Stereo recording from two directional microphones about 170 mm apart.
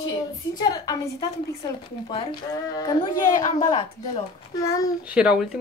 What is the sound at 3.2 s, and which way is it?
Speech, 50° left (ahead or behind).